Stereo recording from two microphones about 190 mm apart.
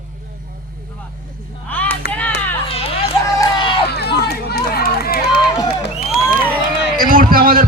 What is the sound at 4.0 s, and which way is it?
Run, 55° left (ahead or behind).